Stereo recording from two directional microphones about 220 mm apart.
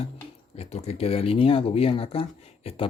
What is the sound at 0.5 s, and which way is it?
Speech, 30° left (ahead or behind).